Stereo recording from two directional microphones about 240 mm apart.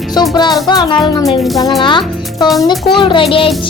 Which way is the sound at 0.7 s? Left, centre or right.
Centre.